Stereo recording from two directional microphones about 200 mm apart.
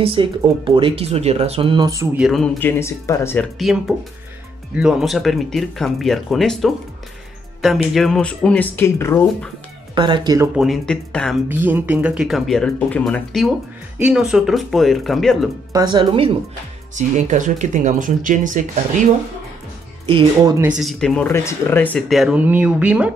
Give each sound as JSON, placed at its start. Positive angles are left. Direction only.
{"t": 0.0, "sound": "speech", "side_deg": -25}
{"t": 2.1, "sound": "speech", "side_deg": 0}
{"t": 3.5, "sound": "speech", "side_deg": 0}
{"t": 9.9, "sound": "speech", "side_deg": -20}
{"t": 10.5, "sound": "speech", "side_deg": 0}
{"t": 11.4, "sound": "speech", "side_deg": -10}
{"t": 15.7, "sound": "speech", "side_deg": -20}
{"t": 16.9, "sound": "speech", "side_deg": -35}
{"t": 20.1, "sound": "speech", "side_deg": -25}
{"t": 20.5, "sound": "speech", "side_deg": -5}